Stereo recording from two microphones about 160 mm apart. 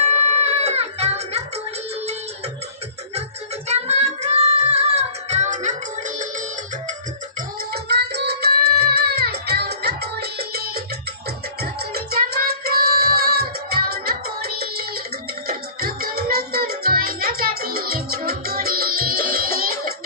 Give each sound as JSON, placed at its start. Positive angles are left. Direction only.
{"t": 0.0, "sound": "music", "side_deg": -40}
{"t": 3.7, "sound": "child singing", "side_deg": -45}
{"t": 7.7, "sound": "music", "side_deg": -90}
{"t": 11.9, "sound": "music", "side_deg": -75}
{"t": 15.4, "sound": "music", "side_deg": -70}